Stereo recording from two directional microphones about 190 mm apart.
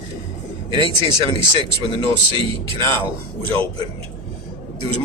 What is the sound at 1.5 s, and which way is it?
Speech, 25° right (ahead or behind).